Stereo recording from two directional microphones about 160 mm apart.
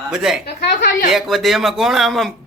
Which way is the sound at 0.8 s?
60° left (ahead or behind).